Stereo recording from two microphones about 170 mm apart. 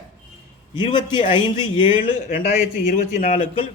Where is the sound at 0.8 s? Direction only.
30° left (ahead or behind).